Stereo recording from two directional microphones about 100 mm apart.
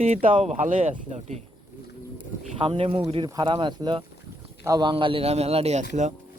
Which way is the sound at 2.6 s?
65° right (ahead or behind).